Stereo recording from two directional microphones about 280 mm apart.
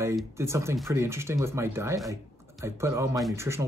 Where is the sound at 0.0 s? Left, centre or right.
Centre.